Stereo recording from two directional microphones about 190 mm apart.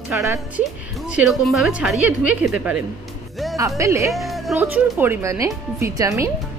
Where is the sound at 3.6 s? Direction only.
15° right (ahead or behind).